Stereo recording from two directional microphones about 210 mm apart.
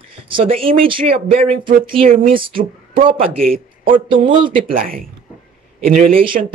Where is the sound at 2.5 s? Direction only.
40° right (ahead or behind).